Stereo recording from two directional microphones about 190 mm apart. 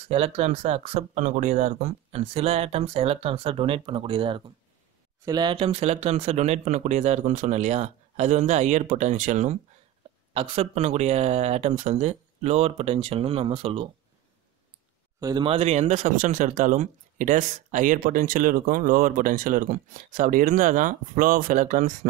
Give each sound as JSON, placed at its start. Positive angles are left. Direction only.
{"t": 0.1, "sound": "speech", "side_deg": -35}
{"t": 15.1, "sound": "speech", "side_deg": -20}